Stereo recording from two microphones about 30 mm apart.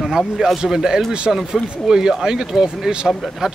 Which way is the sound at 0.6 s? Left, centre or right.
Centre.